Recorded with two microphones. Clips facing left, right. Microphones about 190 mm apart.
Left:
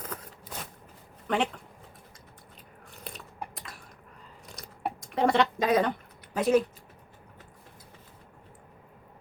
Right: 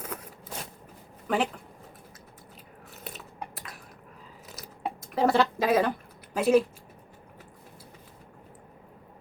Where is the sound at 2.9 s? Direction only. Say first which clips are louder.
Right 1 dB; 5° right (ahead or behind).